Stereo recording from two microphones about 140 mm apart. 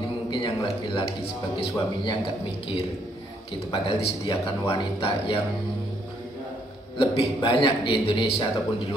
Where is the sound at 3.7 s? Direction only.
40° left (ahead or behind).